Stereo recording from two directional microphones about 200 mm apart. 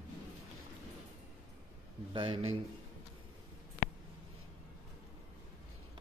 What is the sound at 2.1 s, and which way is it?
Speech, 25° right (ahead or behind).